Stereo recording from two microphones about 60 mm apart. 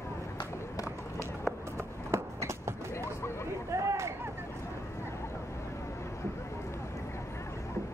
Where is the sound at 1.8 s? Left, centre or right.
Right.